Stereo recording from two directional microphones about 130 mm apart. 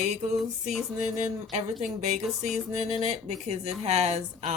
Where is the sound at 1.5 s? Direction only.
65° right (ahead or behind).